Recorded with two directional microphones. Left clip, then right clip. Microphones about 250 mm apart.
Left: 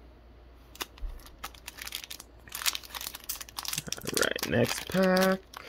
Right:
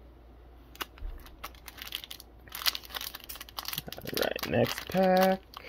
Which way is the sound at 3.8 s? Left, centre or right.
Centre.